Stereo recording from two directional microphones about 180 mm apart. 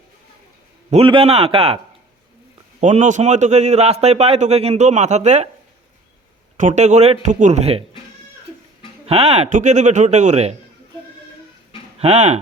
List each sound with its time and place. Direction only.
0.9 s a man's voice: 30° right (ahead or behind)
2.8 s a man's voice: 40° right (ahead or behind)
6.6 s a man's voice: 40° right (ahead or behind)
9.0 s a man's voice: 35° right (ahead or behind)
11.9 s speech: 35° right (ahead or behind)